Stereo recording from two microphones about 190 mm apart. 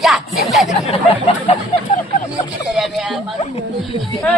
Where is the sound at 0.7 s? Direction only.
30° left (ahead or behind).